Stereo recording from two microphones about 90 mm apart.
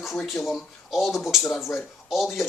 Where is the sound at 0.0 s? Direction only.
Centre (ahead or behind).